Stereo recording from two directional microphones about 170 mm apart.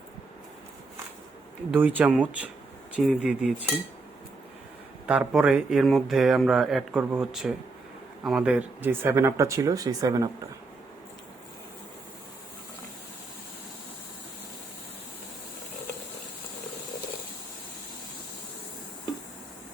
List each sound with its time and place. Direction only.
1.7 s speech: 10° right (ahead or behind)
5.0 s speech: 5° right (ahead or behind)